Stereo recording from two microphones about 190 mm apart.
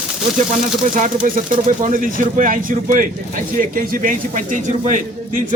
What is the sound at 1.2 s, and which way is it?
Speech, 45° right (ahead or behind).